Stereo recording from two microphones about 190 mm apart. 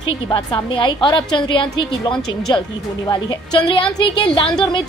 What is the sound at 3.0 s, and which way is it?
A woman's voice, 25° left (ahead or behind).